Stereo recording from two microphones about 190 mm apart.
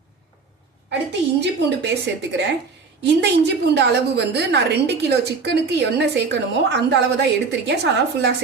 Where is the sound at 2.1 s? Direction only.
65° right (ahead or behind).